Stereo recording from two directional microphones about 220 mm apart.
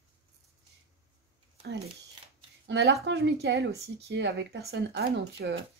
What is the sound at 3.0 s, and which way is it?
Speech, 50° right (ahead or behind).